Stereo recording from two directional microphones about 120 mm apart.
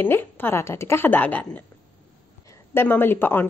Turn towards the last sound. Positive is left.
turn(degrees=15)  # may be behind; listen again after turning